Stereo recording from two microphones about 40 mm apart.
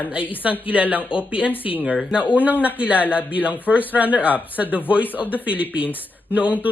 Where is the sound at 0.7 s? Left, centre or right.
Right.